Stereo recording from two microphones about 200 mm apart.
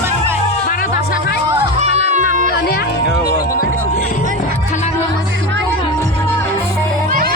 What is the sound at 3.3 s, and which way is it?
Music, 45° left (ahead or behind).